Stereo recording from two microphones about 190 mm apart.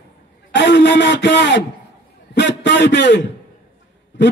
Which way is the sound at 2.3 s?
65° left (ahead or behind).